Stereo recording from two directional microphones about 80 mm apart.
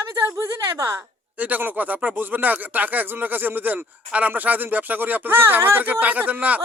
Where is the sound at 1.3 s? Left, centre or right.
Centre.